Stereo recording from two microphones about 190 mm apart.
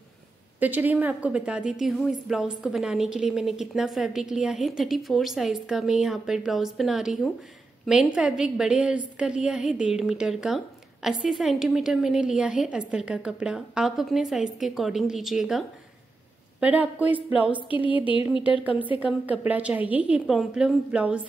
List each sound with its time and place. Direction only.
0.6 s a woman's voice: 10° right (ahead or behind)
17.6 s a sound: 25° left (ahead or behind)
18.9 s a woman's voice: 5° right (ahead or behind)